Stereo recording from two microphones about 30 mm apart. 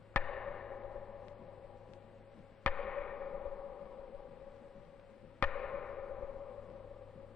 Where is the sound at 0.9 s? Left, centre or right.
Centre.